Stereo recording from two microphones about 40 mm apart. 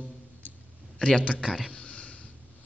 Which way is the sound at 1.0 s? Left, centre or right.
Left.